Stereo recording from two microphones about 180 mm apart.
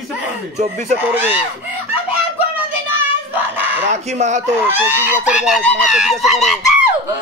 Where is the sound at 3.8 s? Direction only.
40° right (ahead or behind).